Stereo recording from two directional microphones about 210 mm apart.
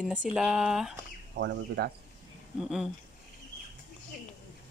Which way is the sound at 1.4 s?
55° right (ahead or behind).